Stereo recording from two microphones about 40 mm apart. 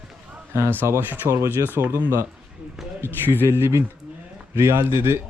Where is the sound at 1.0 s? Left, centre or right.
Right.